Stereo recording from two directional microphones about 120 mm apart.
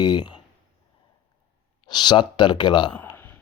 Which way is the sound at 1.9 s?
35° left (ahead or behind).